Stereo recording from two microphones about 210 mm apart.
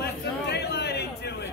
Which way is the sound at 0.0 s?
55° left (ahead or behind).